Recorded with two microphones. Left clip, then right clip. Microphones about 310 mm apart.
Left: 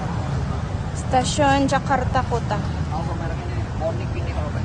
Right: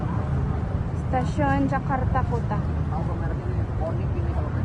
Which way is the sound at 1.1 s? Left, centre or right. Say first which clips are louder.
Left 7 dB; centre.